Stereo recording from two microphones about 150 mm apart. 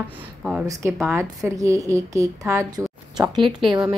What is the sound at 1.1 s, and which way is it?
A woman's voice, 20° right (ahead or behind).